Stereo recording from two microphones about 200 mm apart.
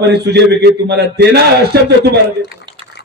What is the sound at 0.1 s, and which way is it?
A man's voice, 55° right (ahead or behind).